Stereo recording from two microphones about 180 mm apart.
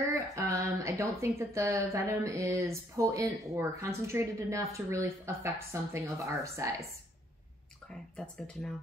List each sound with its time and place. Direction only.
0.0 s a woman's voice: 15° right (ahead or behind)
7.9 s speech: 5° left (ahead or behind)